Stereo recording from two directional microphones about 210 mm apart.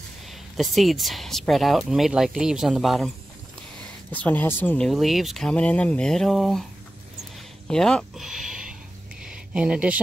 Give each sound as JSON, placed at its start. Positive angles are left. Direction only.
{"t": 0.3, "sound": "speech", "side_deg": 0}
{"t": 4.1, "sound": "speech", "side_deg": 10}
{"t": 7.6, "sound": "a sound", "side_deg": 5}